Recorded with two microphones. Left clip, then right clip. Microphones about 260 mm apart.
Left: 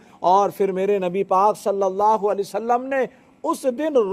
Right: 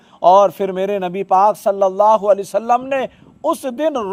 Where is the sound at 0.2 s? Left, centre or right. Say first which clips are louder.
Right 6 dB; right.